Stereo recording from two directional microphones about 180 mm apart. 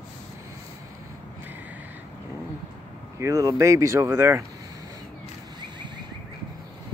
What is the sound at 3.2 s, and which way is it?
Speech, 20° right (ahead or behind).